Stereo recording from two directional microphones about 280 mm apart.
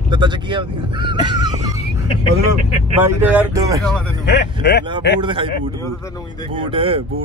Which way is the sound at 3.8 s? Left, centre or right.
Centre.